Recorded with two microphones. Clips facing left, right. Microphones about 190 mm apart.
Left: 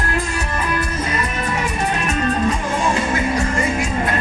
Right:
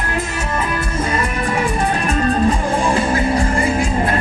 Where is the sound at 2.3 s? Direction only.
30° right (ahead or behind).